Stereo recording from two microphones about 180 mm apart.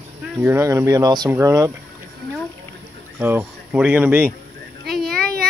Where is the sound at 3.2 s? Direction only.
10° right (ahead or behind).